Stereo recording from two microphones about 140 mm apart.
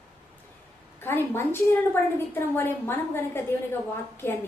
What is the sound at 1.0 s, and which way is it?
A woman's voice, 15° left (ahead or behind).